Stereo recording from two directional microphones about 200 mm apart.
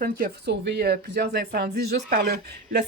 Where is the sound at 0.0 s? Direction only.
50° right (ahead or behind).